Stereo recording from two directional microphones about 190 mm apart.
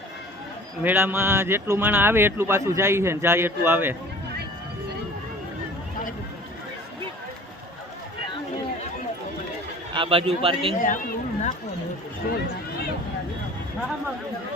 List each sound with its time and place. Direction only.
0.8 s speech: 10° right (ahead or behind)
9.9 s a man's voice: 25° right (ahead or behind)
10.8 s speech: 45° left (ahead or behind)